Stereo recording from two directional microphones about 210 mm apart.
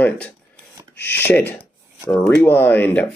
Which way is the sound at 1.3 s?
10° left (ahead or behind).